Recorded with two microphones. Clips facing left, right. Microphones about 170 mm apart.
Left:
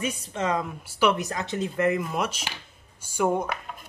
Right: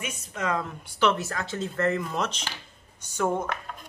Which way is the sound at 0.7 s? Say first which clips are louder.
Left 1 dB; 10° left (ahead or behind).